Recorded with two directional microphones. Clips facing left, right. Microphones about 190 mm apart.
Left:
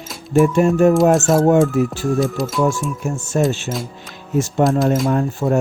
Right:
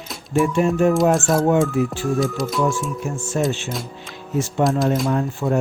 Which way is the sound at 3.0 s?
45° left (ahead or behind).